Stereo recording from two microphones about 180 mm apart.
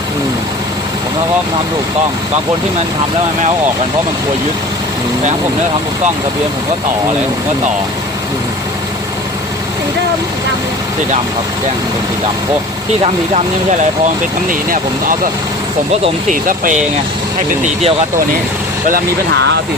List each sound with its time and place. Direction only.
13.0 s speech: 40° right (ahead or behind)
16.3 s speech: 50° right (ahead or behind)